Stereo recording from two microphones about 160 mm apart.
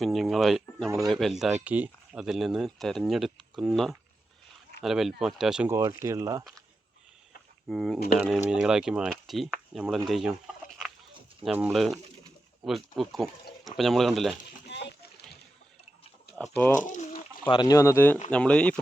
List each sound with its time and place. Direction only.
0.0 s speech: centre (ahead or behind)
5.6 s speech: 15° right (ahead or behind)
7.7 s speech: centre (ahead or behind)
10.1 s chicken: 5° right (ahead or behind)
11.5 s speech: 5° right (ahead or behind)
14.7 s a sound: 90° left
16.8 s bird: 50° left (ahead or behind)
17.5 s speech: 25° left (ahead or behind); by 18.8 s 5° left (ahead or behind)